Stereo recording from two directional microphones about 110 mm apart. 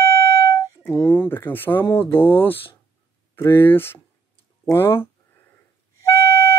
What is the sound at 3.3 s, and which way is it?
Speech, 20° left (ahead or behind).